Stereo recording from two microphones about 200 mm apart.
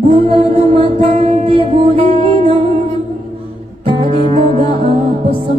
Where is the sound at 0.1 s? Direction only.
30° right (ahead or behind).